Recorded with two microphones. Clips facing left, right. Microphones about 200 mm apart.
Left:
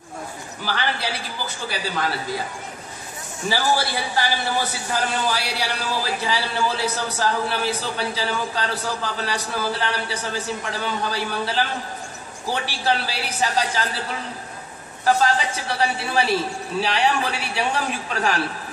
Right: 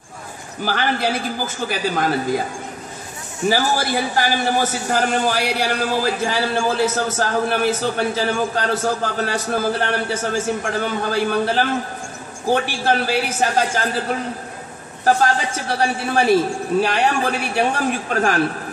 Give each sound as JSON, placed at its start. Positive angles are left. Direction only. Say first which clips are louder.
{"t": 0.7, "sound": "a man's voice", "louder": "right 6 dB", "side_deg": -45}
{"t": 3.4, "sound": "a man's voice", "louder": "right 3 dB", "side_deg": -45}